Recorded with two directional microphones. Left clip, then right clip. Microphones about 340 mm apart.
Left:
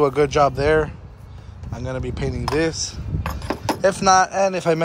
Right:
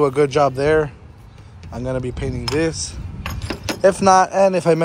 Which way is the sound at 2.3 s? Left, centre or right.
Left.